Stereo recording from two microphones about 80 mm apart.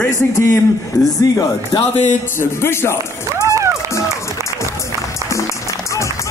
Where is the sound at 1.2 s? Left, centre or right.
Left.